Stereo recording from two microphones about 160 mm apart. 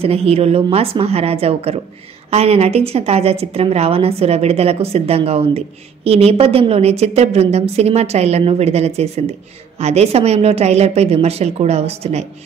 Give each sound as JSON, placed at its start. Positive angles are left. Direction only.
{"t": 0.0, "sound": "a woman's voice", "side_deg": -40}